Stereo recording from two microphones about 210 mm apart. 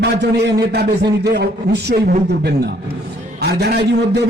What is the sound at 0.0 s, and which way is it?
A man's voice, 50° right (ahead or behind).